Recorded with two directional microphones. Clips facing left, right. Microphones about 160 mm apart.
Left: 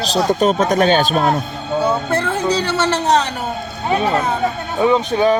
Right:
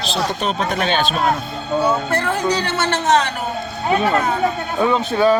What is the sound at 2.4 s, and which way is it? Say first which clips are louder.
Speech: left 2 dB; 30° left (ahead or behind).